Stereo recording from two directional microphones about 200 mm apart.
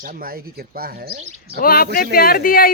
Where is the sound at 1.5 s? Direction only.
45° left (ahead or behind).